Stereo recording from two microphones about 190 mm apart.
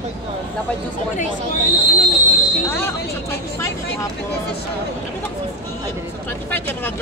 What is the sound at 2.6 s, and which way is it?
Speech, 15° left (ahead or behind).